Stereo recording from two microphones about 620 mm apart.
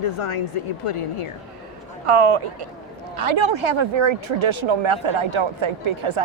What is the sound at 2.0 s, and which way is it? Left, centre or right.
Speech, right.